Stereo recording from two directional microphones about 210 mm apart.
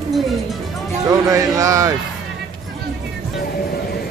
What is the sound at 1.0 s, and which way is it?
Speech, 15° right (ahead or behind).